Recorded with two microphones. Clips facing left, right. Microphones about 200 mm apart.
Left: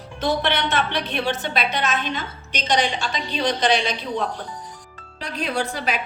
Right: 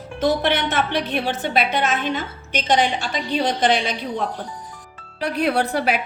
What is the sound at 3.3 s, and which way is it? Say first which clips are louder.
Speech: right 2 dB; 50° right (ahead or behind).